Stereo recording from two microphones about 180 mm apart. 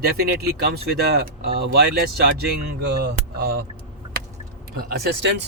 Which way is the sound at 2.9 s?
65° right (ahead or behind).